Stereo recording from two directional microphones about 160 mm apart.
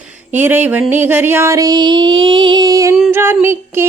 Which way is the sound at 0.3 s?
10° right (ahead or behind).